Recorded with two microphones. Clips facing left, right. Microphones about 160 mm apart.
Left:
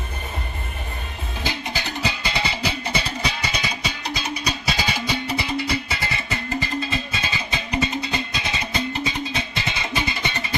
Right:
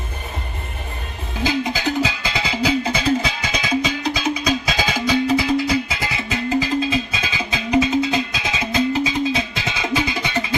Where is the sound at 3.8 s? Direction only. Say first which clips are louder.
Right 7 dB; 90° right.